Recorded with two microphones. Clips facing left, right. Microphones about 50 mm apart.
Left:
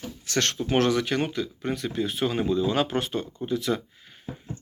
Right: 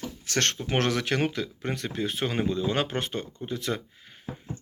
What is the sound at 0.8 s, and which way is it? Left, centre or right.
Speech, right.